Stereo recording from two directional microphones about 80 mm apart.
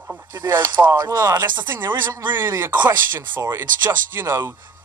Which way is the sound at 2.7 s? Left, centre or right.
Right.